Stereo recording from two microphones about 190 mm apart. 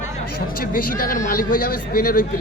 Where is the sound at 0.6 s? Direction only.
50° left (ahead or behind).